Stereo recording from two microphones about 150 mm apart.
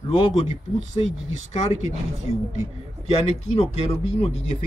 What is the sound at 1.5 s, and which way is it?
Speech, 45° left (ahead or behind).